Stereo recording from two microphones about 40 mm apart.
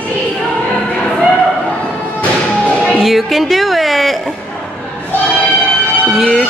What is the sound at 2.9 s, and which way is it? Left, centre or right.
Music, centre.